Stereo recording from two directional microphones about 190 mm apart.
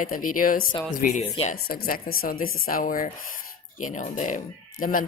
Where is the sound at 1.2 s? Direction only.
30° left (ahead or behind).